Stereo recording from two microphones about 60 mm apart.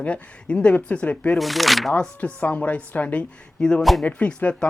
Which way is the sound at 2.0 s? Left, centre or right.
Left.